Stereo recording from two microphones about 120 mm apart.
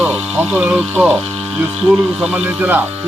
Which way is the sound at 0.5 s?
5° right (ahead or behind).